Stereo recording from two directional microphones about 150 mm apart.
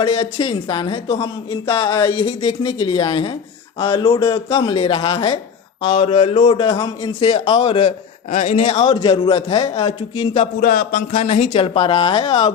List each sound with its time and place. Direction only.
0.0 s speech: 40° left (ahead or behind)
6.6 s a man's voice: 20° left (ahead or behind)
7.2 s speech: 40° left (ahead or behind)
8.3 s speech: 50° left (ahead or behind)
8.6 s speech: 35° left (ahead or behind)
10.6 s speech: 80° left; by 11.5 s 55° left (ahead or behind)
11.5 s speech: 35° left (ahead or behind)